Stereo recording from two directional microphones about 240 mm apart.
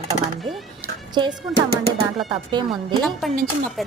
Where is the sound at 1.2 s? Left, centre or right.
Centre.